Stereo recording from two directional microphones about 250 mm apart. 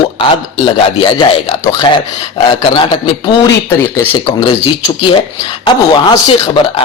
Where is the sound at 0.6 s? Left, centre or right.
Centre.